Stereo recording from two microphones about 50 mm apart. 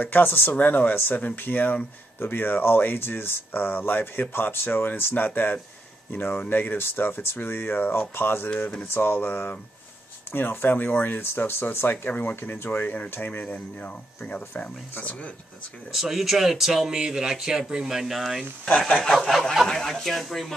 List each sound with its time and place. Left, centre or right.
0.0 s speech: left
12.2 s speech: left
15.9 s speech: centre
19.7 s speech: centre